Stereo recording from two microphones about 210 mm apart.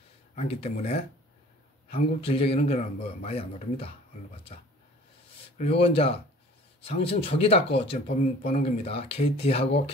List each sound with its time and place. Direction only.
0.4 s a man's voice: 30° left (ahead or behind)
5.6 s a man's voice: 30° left (ahead or behind)